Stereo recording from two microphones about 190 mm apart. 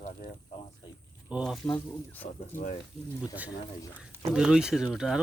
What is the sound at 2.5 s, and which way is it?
Speech, 45° left (ahead or behind).